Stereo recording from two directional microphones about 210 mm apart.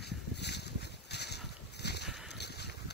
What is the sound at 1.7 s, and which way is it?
Boat, 50° left (ahead or behind).